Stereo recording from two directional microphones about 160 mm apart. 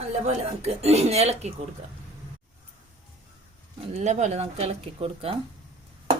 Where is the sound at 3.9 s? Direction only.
45° right (ahead or behind).